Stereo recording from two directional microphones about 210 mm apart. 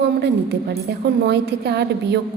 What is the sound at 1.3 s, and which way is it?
Speech, 50° right (ahead or behind).